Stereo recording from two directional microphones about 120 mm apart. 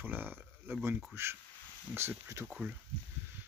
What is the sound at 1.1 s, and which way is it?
Speech, 20° right (ahead or behind).